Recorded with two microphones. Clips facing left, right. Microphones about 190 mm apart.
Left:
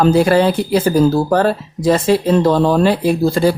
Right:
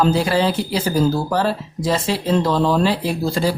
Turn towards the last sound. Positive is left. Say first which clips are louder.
# left 6 dB
turn(degrees=55)  # may be behind; listen again after turning